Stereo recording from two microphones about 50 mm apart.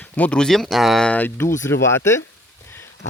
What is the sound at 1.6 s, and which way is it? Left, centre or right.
Speech, left.